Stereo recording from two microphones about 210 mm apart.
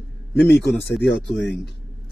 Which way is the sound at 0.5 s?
55° left (ahead or behind).